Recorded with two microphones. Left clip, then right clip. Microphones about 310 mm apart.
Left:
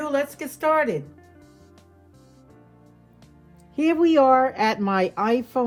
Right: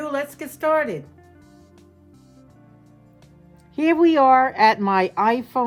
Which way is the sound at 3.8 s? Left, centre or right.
Right.